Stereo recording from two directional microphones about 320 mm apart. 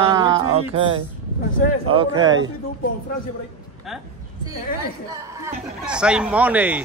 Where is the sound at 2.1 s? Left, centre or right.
Right.